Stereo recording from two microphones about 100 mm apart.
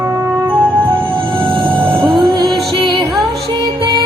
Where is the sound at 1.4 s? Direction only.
60° right (ahead or behind).